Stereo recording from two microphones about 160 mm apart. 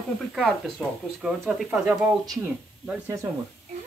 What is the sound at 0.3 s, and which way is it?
Speech, centre (ahead or behind).